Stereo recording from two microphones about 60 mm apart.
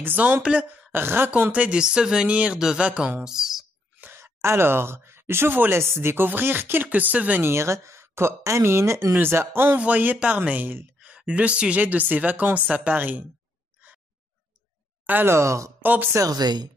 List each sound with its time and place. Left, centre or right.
0.0 s speech: right
0.9 s speech: right
1.5 s speech: centre
4.2 s speech: right
7.4 s speech: right
9.1 s speech: right
9.8 s speech: right
10.1 s speech: centre
10.5 s speech: right
11.1 s speech: right
12.9 s speech: right
15.2 s speech: right
15.8 s speech: right
16.1 s speech: right